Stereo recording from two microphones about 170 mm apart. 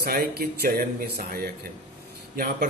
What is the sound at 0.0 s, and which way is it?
Speech, 65° right (ahead or behind).